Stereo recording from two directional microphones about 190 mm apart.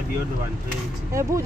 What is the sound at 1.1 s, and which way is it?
Speech, 15° right (ahead or behind).